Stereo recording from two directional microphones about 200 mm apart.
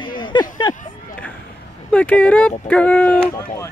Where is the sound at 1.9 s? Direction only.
10° left (ahead or behind).